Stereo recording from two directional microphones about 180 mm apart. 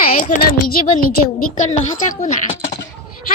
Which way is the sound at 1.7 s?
40° left (ahead or behind).